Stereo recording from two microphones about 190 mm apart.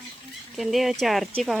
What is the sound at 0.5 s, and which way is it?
Speech, centre (ahead or behind).